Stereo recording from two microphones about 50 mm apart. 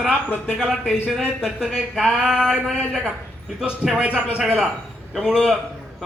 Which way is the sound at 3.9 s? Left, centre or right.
Right.